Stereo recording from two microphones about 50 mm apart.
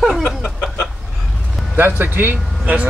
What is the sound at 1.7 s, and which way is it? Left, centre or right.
Speech, right.